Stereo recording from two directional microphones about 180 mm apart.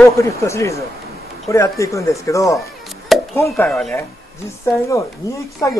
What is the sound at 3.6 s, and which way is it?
Speech, 5° left (ahead or behind).